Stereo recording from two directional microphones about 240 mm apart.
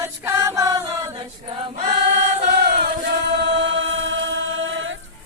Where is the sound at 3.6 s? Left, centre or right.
Right.